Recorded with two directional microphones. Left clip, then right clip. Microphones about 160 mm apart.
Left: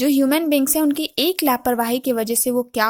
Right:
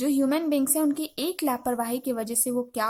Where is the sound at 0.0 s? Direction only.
25° left (ahead or behind).